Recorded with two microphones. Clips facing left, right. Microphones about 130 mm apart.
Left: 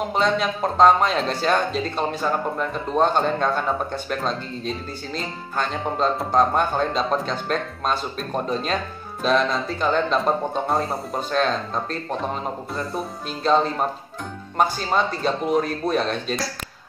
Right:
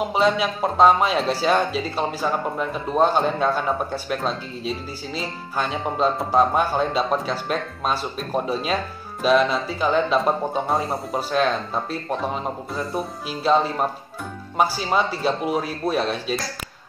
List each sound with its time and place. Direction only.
0.0 s speech: 5° right (ahead or behind)